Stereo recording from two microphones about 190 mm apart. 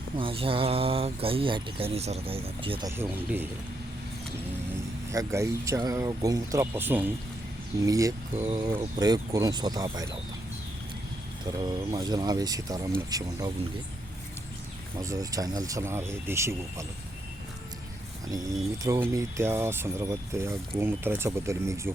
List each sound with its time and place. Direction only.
0.2 s speech: 30° right (ahead or behind)
2.9 s speech: 10° right (ahead or behind)
5.1 s speech: 15° right (ahead or behind)
11.5 s speech: 20° right (ahead or behind)
14.9 s speech: 15° right (ahead or behind)
18.8 s speech: 15° right (ahead or behind)